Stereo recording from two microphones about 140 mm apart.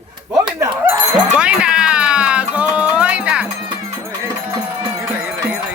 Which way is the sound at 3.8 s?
20° right (ahead or behind).